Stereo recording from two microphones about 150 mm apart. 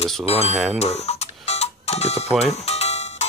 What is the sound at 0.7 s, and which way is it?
Music, 45° left (ahead or behind).